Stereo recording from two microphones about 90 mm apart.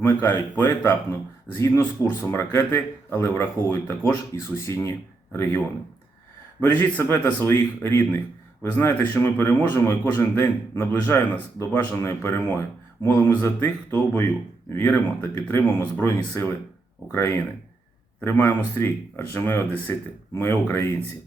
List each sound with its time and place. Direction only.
0.0 s speech: 25° left (ahead or behind)
11.9 s speech: 30° left (ahead or behind)